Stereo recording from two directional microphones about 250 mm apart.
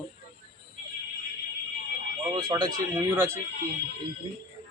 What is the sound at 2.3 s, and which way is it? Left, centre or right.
Speech, centre.